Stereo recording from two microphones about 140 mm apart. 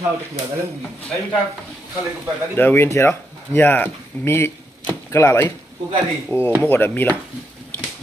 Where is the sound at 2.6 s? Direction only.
15° left (ahead or behind).